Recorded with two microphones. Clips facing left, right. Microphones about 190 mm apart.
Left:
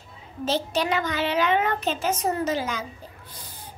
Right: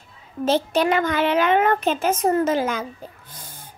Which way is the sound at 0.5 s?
55° right (ahead or behind).